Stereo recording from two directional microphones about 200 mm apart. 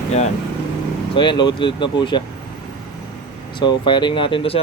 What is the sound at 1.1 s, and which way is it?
Speech, 25° left (ahead or behind).